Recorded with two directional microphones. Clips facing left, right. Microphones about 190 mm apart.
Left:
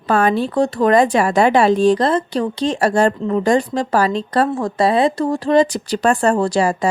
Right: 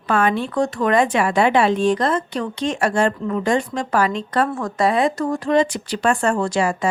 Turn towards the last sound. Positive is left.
turn(degrees=35)  # may be behind; listen again after turning